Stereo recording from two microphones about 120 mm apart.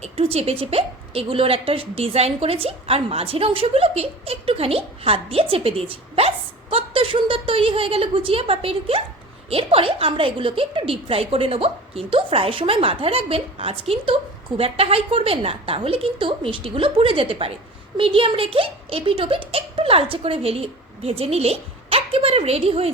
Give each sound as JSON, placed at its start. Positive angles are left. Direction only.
{"t": 0.0, "sound": "a woman's voice", "side_deg": -60}